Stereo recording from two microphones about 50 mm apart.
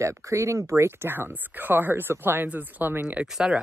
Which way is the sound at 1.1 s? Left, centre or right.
Right.